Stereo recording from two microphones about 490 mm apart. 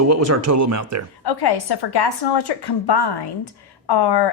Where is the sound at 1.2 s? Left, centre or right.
Left.